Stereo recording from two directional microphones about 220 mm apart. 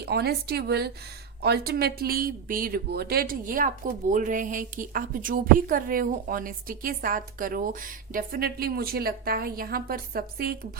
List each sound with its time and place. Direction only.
0.0 s a woman's voice: 45° right (ahead or behind)